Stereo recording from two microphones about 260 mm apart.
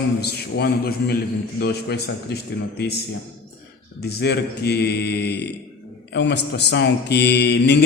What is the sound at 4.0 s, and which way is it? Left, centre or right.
A man's voice, left.